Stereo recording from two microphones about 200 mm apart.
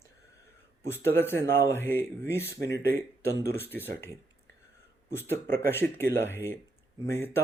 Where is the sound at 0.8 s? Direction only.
10° left (ahead or behind).